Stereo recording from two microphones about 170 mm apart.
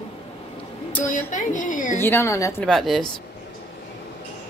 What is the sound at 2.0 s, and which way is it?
Speech, 15° left (ahead or behind).